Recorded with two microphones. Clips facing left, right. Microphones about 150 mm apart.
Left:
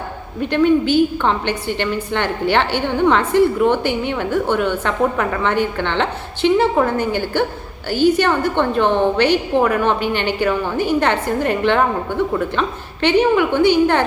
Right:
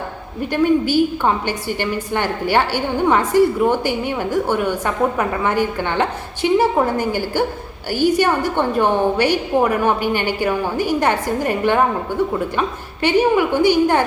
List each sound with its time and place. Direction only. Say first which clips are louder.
0.5 s a woman's voice: left 1 dB; 10° right (ahead or behind)